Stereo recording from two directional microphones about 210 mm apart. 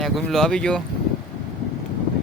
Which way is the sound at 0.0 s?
Centre (ahead or behind).